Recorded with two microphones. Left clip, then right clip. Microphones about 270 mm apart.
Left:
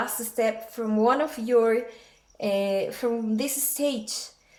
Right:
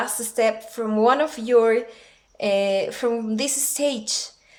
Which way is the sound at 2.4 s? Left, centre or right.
Right.